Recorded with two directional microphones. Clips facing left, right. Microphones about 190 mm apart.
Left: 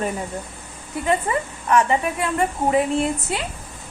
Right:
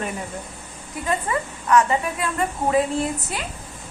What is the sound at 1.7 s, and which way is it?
Speech, 25° left (ahead or behind).